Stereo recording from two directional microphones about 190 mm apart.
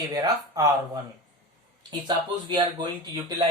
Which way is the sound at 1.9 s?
25° right (ahead or behind).